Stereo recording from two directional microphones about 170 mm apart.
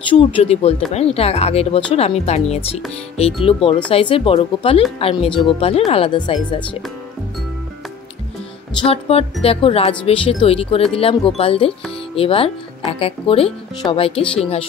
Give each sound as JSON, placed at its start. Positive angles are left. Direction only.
{"t": 0.1, "sound": "speech", "side_deg": 35}
{"t": 8.8, "sound": "speech", "side_deg": 35}